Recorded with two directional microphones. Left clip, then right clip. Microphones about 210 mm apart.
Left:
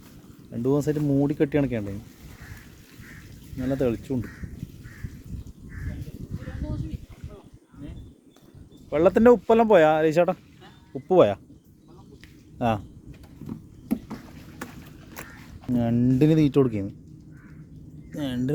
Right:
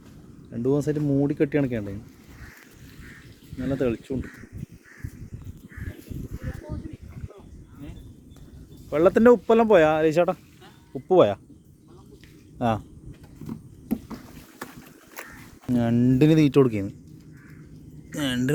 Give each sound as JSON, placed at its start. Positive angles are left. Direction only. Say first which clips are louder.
{"t": 0.5, "sound": "speech", "louder": "even", "side_deg": 10}
{"t": 3.6, "sound": "speech", "louder": "even", "side_deg": 15}
{"t": 8.9, "sound": "speech", "louder": "even", "side_deg": 0}
{"t": 12.5, "sound": "speech", "louder": "even", "side_deg": 0}
{"t": 13.4, "sound": "a sound", "louder": "right 1 dB", "side_deg": -30}
{"t": 13.8, "sound": "a sound", "louder": "left 1 dB", "side_deg": 20}
{"t": 15.7, "sound": "speech", "louder": "right 1 dB", "side_deg": 0}
{"t": 18.1, "sound": "speech", "louder": "right 3 dB", "side_deg": 5}